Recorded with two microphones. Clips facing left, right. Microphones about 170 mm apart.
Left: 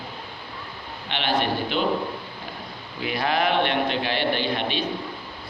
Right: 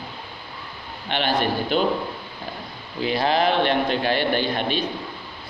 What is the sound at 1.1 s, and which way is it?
Speech, 45° right (ahead or behind).